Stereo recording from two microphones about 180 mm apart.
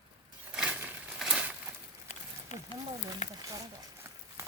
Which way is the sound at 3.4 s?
20° right (ahead or behind).